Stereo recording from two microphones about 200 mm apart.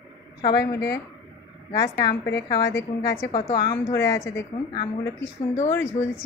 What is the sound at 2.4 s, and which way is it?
A woman's voice, 20° left (ahead or behind).